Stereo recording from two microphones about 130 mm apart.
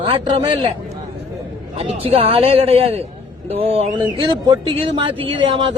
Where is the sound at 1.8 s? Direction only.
50° right (ahead or behind).